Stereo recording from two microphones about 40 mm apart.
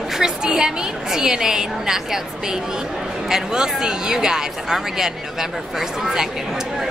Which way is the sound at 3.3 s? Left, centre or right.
Centre.